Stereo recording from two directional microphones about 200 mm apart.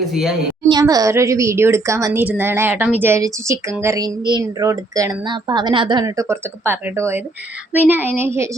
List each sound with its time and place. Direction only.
0.0 s a woman's voice: centre (ahead or behind)
0.7 s a woman's voice: 20° right (ahead or behind)